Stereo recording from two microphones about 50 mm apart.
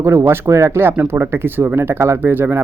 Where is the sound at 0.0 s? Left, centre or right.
Right.